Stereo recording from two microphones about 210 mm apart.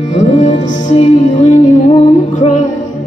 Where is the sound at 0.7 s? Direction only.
35° left (ahead or behind).